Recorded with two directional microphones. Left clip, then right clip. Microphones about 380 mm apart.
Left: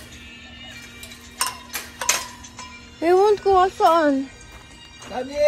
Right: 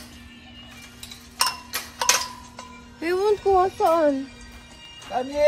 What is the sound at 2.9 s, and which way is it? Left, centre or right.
Speech, centre.